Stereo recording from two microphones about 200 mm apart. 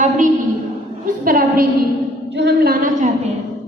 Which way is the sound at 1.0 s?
40° right (ahead or behind).